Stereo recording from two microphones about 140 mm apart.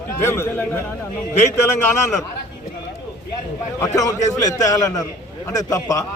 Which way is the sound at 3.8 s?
25° left (ahead or behind).